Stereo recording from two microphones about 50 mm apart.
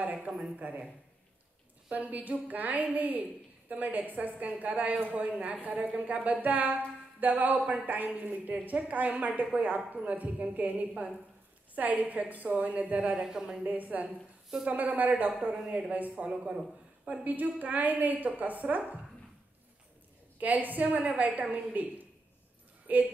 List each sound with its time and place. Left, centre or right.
0.0 s a sound: right
0.6 s a woman's voice: right
1.9 s a woman's voice: right
13.1 s speech: centre
13.7 s a woman's voice: right
17.2 s a woman's voice: right
20.3 s a woman's voice: right